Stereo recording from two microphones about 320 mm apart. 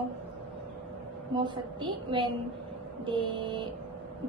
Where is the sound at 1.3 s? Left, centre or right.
Centre.